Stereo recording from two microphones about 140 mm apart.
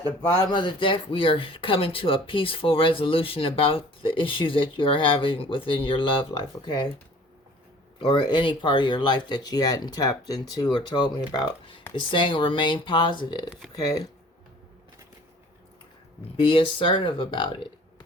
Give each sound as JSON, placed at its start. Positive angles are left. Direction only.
{"t": 0.4, "sound": "speech", "side_deg": 35}
{"t": 8.0, "sound": "speech", "side_deg": 35}
{"t": 16.4, "sound": "speech", "side_deg": 35}